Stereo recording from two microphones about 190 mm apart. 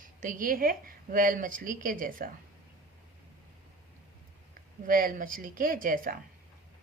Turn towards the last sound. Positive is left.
turn(degrees=-45)  # may be behind; listen again after turning